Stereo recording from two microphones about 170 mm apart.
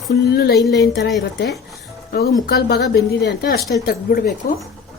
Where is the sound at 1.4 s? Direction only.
Centre (ahead or behind).